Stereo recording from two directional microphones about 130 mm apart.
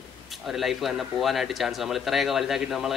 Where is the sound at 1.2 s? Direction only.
Centre (ahead or behind).